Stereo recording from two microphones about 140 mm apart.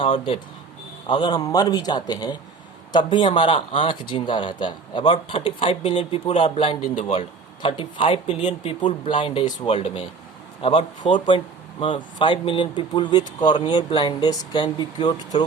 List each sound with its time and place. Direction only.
0.0 s speech: 40° left (ahead or behind)